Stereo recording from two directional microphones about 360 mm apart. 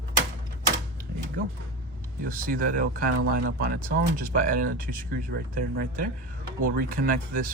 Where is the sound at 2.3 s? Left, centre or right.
Right.